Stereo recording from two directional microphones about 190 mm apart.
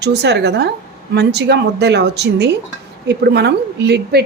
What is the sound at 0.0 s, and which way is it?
A woman's voice, 60° right (ahead or behind).